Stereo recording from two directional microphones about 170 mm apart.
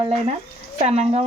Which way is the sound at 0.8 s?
40° right (ahead or behind).